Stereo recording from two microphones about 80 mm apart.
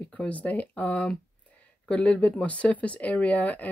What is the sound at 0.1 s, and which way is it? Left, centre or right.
Speech, centre.